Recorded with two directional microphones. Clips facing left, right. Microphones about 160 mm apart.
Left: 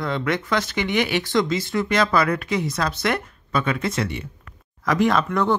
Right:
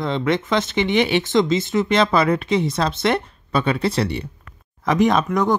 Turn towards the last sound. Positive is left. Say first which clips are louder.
# right 2 dB
turn(degrees=-15)  # may be behind; listen again after turning